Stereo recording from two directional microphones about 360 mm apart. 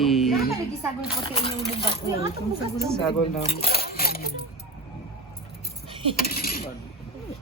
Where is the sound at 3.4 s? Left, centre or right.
Centre.